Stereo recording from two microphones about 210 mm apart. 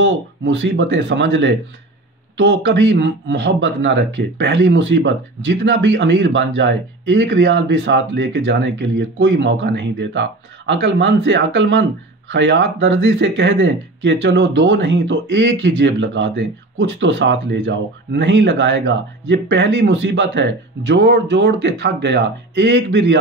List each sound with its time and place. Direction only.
0.0 s speech: 60° right (ahead or behind)